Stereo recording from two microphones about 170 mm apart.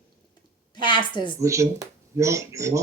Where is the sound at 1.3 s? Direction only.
15° right (ahead or behind).